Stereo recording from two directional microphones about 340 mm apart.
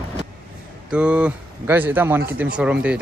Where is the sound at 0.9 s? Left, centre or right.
Centre.